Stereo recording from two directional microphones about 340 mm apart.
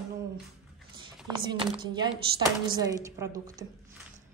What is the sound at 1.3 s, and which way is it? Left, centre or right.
A woman's voice, centre.